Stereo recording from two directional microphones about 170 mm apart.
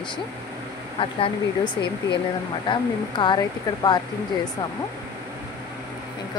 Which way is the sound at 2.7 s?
25° left (ahead or behind).